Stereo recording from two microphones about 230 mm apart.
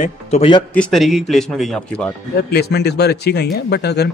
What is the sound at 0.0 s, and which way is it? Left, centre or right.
Speech, left.